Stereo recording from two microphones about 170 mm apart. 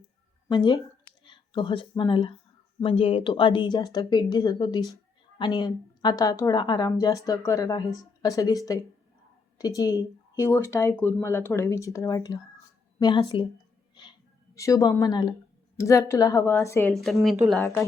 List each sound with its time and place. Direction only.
0.4 s a woman's voice: 25° left (ahead or behind)
16.9 s speech: centre (ahead or behind)